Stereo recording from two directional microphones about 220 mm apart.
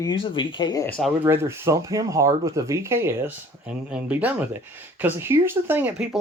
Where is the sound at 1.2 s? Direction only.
10° right (ahead or behind).